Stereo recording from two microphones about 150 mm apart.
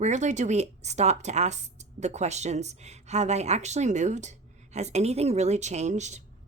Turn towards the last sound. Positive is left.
turn(degrees=-50)  # may be behind; listen again after turning